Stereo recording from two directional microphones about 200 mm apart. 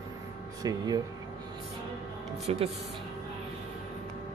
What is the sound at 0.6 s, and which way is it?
Speech, 20° right (ahead or behind).